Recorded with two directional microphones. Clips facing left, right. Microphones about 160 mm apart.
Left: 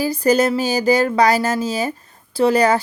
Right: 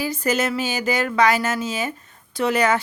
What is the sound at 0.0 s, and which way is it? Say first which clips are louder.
Speech: left 6 dB; 35° left (ahead or behind).